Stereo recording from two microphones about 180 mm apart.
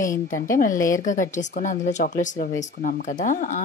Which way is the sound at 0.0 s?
50° left (ahead or behind).